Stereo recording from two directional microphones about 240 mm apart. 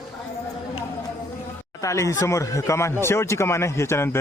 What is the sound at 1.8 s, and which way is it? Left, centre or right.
Speech, centre.